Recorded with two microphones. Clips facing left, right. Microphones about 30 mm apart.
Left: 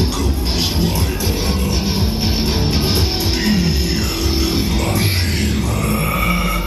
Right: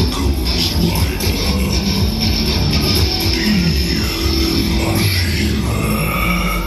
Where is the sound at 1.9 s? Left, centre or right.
Right.